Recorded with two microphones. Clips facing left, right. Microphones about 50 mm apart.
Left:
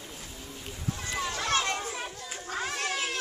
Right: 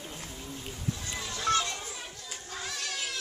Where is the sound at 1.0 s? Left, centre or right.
Left.